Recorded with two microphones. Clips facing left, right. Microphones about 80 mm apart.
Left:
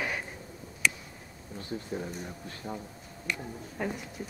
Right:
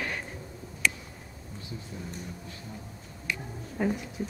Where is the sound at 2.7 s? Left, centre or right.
Left.